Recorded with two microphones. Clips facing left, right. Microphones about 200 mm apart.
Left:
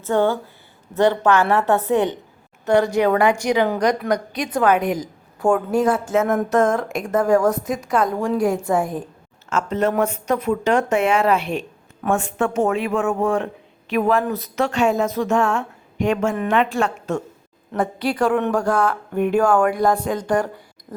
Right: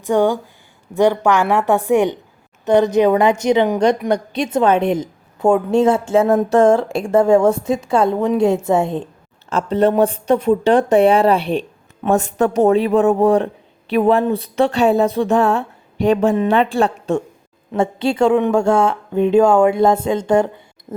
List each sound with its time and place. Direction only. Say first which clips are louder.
0.0 s a woman's voice: right 3 dB; 15° right (ahead or behind)